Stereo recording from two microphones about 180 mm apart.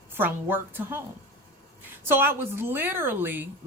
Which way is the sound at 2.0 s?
10° right (ahead or behind).